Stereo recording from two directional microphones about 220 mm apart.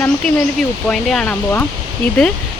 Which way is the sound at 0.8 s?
5° left (ahead or behind).